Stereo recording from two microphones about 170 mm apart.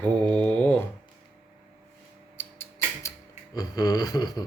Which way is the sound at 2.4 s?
15° left (ahead or behind).